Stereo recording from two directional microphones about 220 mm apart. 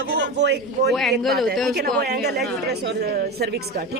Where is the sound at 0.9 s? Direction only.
Centre (ahead or behind).